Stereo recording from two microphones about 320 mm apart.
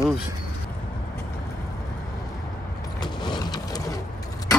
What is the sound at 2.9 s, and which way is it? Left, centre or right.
Vehicle, centre.